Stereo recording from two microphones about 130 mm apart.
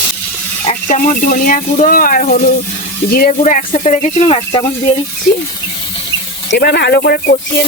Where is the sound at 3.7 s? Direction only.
65° left (ahead or behind).